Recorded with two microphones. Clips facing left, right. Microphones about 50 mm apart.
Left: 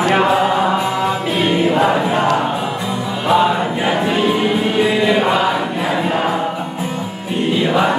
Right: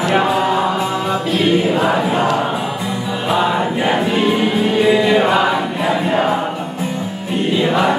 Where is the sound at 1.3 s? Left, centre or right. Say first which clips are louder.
Right 2 dB; centre.